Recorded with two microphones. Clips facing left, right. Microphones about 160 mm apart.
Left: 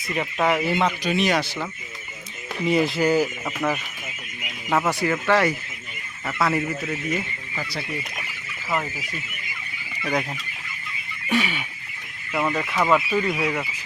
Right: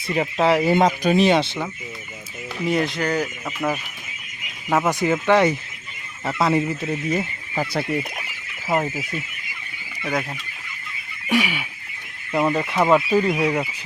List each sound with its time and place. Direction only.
0.1 s speech: 30° right (ahead or behind)
2.6 s speech: centre (ahead or behind)
4.7 s speech: 15° right (ahead or behind)
7.1 s speech: 45° right (ahead or behind)
8.6 s speech: 30° right (ahead or behind)
11.3 s a sound: 10° right (ahead or behind)
12.3 s speech: 20° right (ahead or behind)